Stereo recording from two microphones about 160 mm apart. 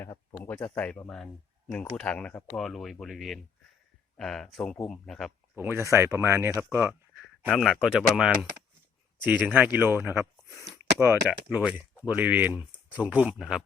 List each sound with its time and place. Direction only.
0.0 s speech: 15° left (ahead or behind)
5.5 s speech: 15° right (ahead or behind)
7.4 s speech: centre (ahead or behind)
9.7 s speech: 10° right (ahead or behind)
10.8 s a sound: 15° right (ahead or behind)
11.3 s speech: 10° right (ahead or behind)